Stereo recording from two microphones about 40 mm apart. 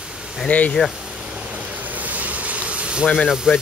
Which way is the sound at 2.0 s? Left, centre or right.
Right.